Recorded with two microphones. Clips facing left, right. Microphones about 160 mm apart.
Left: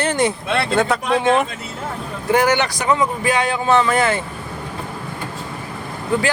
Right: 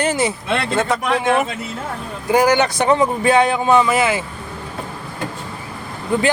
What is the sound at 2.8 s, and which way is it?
Speech, 30° right (ahead or behind).